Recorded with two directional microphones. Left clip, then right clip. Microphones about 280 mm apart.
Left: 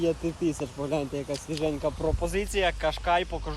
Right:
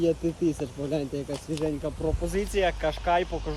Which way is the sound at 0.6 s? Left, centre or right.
Left.